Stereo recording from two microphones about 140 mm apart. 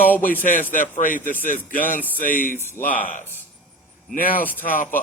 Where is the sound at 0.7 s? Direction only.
70° left (ahead or behind).